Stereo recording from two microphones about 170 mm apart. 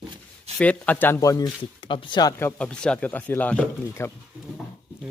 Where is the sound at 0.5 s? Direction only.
5° left (ahead or behind).